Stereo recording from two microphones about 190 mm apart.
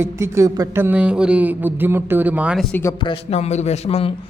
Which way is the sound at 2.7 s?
15° left (ahead or behind).